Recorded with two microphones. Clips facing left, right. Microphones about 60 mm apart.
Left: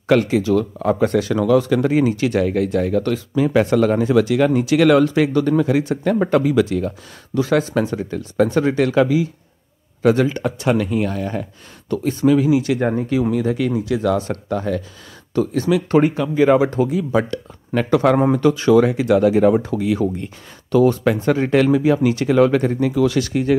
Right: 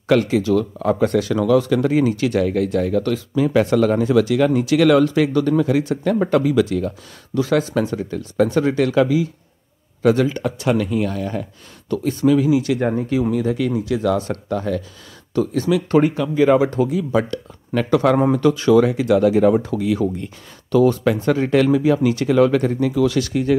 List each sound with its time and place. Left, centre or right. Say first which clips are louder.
0.0 s speech: left 1 dB; left
13.3 s speech: left 1 dB; left